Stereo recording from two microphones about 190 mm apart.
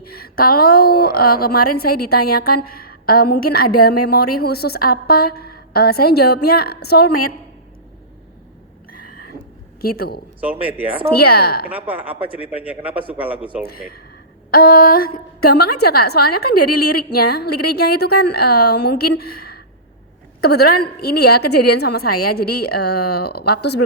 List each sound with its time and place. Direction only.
0.0 s a woman's voice: 55° left (ahead or behind)
9.8 s a woman's voice: 55° left (ahead or behind)
11.7 s a man's voice: 10° right (ahead or behind)
14.5 s a woman's voice: 50° left (ahead or behind)